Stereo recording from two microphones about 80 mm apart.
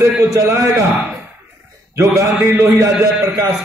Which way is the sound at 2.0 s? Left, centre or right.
Right.